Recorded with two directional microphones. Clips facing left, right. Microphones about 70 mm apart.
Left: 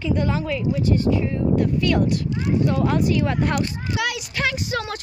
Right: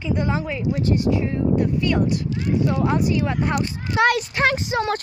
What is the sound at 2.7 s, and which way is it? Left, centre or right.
Speech, centre.